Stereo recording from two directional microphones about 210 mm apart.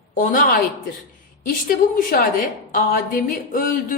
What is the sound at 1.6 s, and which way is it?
A woman's voice, 40° left (ahead or behind).